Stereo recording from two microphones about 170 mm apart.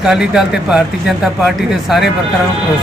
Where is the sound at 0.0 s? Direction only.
5° right (ahead or behind).